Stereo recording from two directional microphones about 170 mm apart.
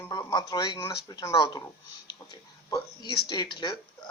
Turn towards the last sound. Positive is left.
turn(degrees=25)  # may be behind; listen again after turning